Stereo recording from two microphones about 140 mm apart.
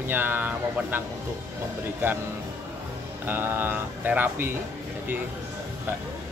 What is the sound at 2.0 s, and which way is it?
Speech, 15° right (ahead or behind).